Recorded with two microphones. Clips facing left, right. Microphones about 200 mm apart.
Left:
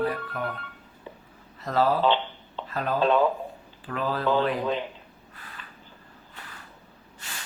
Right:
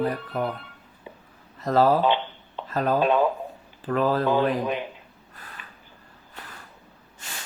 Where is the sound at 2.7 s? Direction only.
40° right (ahead or behind).